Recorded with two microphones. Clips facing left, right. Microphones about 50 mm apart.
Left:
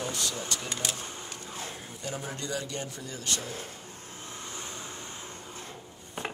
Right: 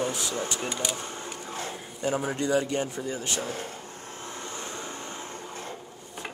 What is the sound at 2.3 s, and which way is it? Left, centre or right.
Speech, right.